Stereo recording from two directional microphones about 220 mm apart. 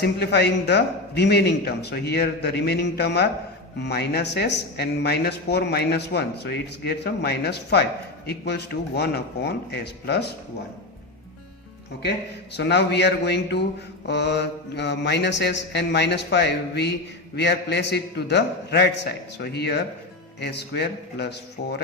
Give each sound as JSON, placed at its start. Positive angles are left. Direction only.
{"t": 0.0, "sound": "speech", "side_deg": 50}
{"t": 12.5, "sound": "speech", "side_deg": 50}